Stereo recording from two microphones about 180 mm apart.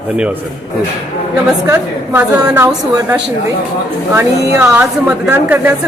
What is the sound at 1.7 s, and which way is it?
A woman's voice, 15° right (ahead or behind).